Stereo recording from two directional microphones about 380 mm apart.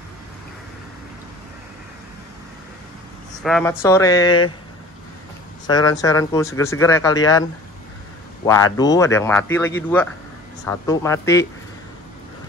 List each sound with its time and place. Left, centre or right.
3.4 s speech: centre
5.7 s speech: centre
8.7 s speech: centre